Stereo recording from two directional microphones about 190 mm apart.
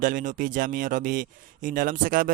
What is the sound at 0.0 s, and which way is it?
Speech, 45° right (ahead or behind).